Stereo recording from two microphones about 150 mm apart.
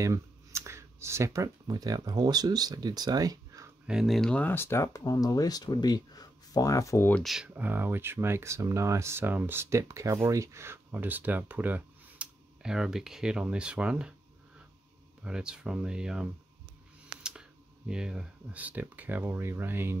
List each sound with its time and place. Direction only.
0.0 s speech: 20° right (ahead or behind)
3.8 s speech: 5° right (ahead or behind); by 7.2 s 15° left (ahead or behind)
7.2 s speech: 5° right (ahead or behind)
15.2 s speech: 5° right (ahead or behind)